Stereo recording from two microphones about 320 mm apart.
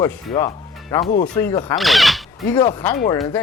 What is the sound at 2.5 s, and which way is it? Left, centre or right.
Speech, centre.